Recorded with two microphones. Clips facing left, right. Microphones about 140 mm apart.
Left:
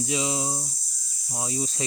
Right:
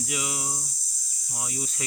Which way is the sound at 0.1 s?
25° left (ahead or behind).